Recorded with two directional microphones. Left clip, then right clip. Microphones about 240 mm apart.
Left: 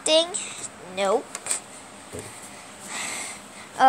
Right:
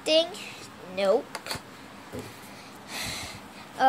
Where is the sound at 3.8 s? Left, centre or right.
Centre.